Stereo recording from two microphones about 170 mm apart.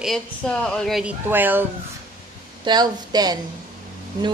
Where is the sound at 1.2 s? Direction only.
10° right (ahead or behind).